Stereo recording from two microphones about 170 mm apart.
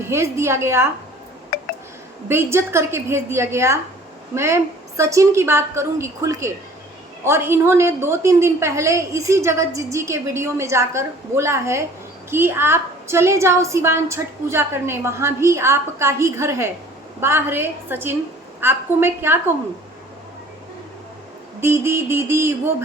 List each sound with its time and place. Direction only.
0.1 s a woman's voice: 15° right (ahead or behind)
1.5 s a sound: 65° left (ahead or behind)
2.3 s a woman's voice: 15° right (ahead or behind)
21.6 s a woman's voice: 15° right (ahead or behind)